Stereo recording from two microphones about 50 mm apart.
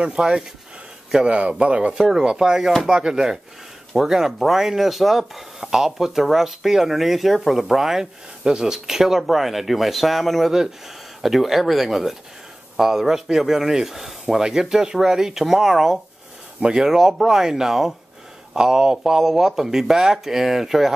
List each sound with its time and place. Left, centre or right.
0.0 s speech: centre
2.0 s speech: centre
16.9 s speech: centre